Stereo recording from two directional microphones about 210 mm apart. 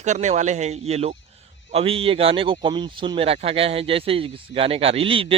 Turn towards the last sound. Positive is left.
turn(degrees=-25)  # may be behind; listen again after turning